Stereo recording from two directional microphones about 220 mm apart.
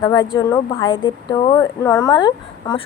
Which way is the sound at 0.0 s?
20° left (ahead or behind).